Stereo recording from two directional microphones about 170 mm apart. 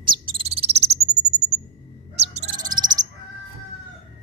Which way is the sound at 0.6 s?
35° right (ahead or behind).